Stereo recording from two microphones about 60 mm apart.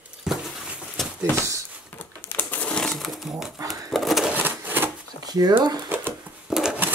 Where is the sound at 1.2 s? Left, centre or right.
Right.